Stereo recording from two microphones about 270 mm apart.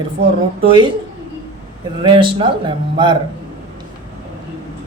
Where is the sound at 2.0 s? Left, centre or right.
Centre.